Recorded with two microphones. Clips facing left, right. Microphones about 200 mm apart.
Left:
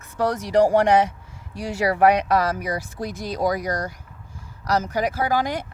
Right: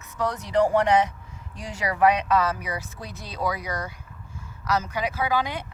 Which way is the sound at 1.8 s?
35° left (ahead or behind).